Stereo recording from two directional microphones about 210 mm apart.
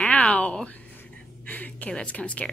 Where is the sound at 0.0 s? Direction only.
5° left (ahead or behind).